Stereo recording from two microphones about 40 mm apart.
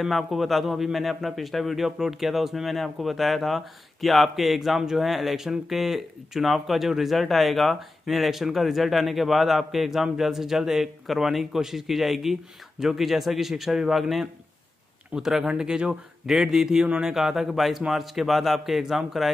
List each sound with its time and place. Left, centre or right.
0.0 s speech: centre
1.9 s speech: centre
16.3 s speech: centre
16.8 s speech: right
17.1 s speech: centre